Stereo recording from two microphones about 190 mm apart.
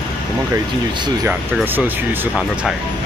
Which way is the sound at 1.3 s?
10° right (ahead or behind).